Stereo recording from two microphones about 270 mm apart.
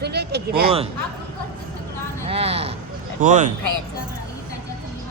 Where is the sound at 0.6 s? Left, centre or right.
Right.